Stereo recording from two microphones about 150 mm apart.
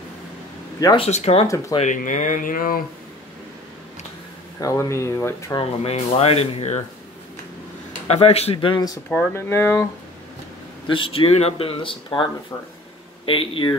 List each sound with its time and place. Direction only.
0.7 s speech: 25° left (ahead or behind)
1.0 s speech: 45° left (ahead or behind)
1.8 s speech: 60° left (ahead or behind)
4.6 s speech: 20° left (ahead or behind)
5.6 s speech: 40° left (ahead or behind)
8.1 s speech: 45° left (ahead or behind); by 9.0 s 25° left (ahead or behind)
9.3 s speech: 15° left (ahead or behind)
10.9 s speech: 35° left (ahead or behind)